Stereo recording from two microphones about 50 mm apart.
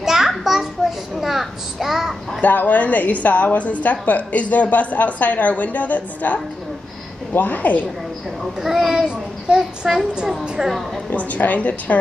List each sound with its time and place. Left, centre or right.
0.0 s children playing: centre
1.2 s a sound: centre
2.4 s a woman's voice: left
8.5 s a child's voice: centre
11.1 s a woman's voice: left